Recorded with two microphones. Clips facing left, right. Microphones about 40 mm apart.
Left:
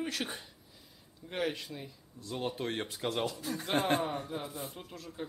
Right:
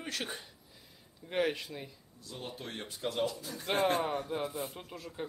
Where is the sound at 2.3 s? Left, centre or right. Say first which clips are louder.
Left 7 dB; left.